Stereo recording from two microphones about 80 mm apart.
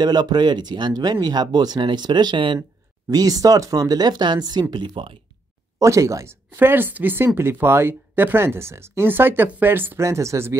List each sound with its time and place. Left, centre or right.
0.0 s speech: right
3.1 s speech: right
5.8 s speech: right
6.6 s speech: right
10.0 s speech: right